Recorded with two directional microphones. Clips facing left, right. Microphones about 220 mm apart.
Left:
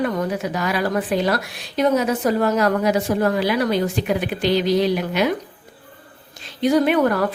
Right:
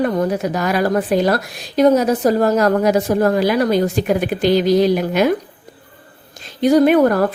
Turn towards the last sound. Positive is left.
turn(degrees=-45)  # may be behind; listen again after turning